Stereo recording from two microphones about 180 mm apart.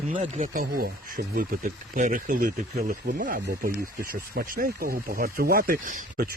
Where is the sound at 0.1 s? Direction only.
45° right (ahead or behind).